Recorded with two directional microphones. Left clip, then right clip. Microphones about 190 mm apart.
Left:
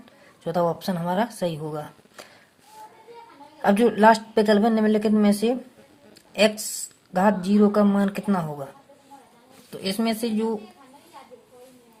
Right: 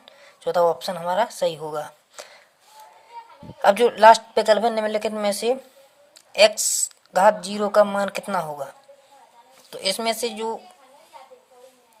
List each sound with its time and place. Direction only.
0.4 s speech: 20° right (ahead or behind)
3.6 s a woman's voice: 25° right (ahead or behind)